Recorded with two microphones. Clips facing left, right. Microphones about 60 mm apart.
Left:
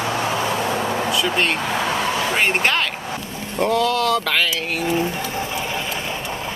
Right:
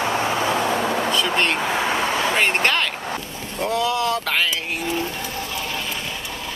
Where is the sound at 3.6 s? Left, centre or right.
Left.